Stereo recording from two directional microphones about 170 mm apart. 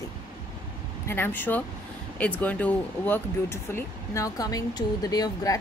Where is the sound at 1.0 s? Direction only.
10° left (ahead or behind).